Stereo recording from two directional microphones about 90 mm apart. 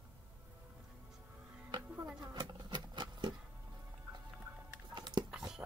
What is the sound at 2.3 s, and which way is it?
Insect, 50° right (ahead or behind).